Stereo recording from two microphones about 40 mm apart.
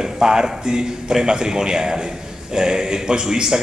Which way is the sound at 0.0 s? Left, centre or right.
Centre.